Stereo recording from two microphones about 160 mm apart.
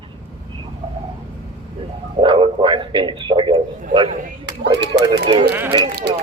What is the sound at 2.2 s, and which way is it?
A man's voice, 30° right (ahead or behind).